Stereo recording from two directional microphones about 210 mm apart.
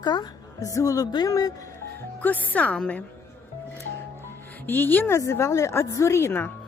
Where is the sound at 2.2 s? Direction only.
5° left (ahead or behind).